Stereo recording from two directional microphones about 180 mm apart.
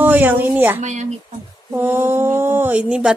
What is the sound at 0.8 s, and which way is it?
Speech, 40° right (ahead or behind).